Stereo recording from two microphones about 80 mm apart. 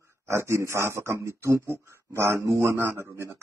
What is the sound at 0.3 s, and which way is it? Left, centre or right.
Speech, right.